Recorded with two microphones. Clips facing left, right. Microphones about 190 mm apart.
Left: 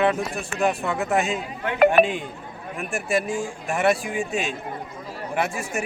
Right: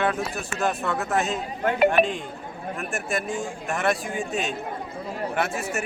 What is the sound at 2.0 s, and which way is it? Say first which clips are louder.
Speech: left 3 dB; 45° left (ahead or behind).